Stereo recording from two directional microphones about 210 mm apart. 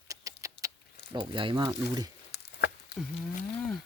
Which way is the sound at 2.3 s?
55° left (ahead or behind).